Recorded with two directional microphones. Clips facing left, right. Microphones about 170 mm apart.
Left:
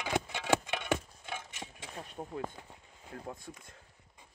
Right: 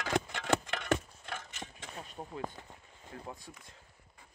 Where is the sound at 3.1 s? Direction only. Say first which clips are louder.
Left 2 dB; 50° left (ahead or behind).